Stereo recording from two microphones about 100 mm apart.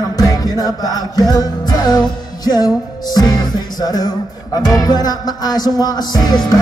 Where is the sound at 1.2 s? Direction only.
40° left (ahead or behind).